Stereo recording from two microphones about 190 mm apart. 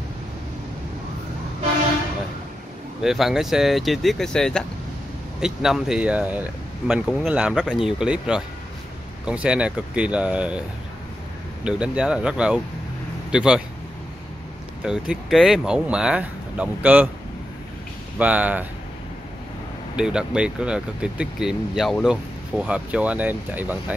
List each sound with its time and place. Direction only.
3.0 s speech: centre (ahead or behind)
11.6 s speech: 5° right (ahead or behind)
14.8 s speech: 5° right (ahead or behind)
18.2 s speech: 10° right (ahead or behind)
20.0 s speech: 5° right (ahead or behind)